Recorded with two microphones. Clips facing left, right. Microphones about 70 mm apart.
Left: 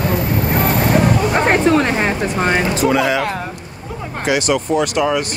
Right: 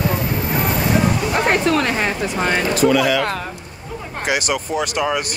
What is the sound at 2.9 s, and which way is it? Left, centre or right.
Speech, left.